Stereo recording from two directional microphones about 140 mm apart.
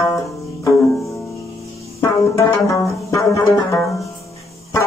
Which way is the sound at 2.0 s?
20° left (ahead or behind).